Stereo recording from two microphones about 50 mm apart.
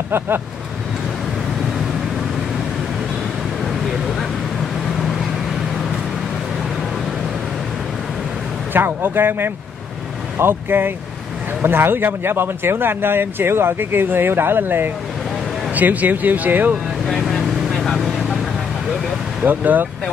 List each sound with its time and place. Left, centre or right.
8.7 s speech: right
15.7 s speech: right
17.0 s vehicle: centre
19.4 s speech: right